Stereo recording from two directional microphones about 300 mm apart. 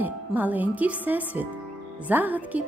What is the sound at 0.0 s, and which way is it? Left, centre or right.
A woman's voice, centre.